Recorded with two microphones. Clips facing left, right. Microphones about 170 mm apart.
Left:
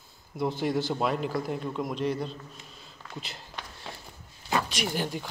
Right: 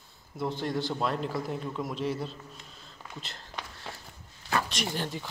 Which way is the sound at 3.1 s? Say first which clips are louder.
Left 4 dB; 5° left (ahead or behind).